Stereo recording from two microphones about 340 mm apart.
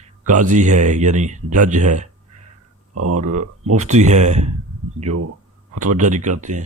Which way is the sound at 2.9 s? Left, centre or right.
Right.